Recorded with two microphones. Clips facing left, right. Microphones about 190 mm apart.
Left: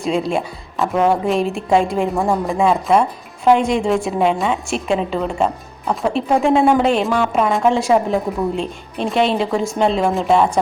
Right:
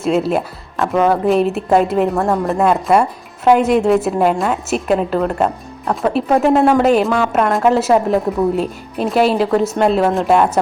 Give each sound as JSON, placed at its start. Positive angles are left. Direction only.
{"t": 0.0, "sound": "a woman's voice", "side_deg": -5}